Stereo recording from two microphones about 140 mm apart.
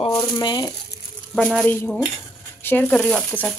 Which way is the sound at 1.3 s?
Centre (ahead or behind).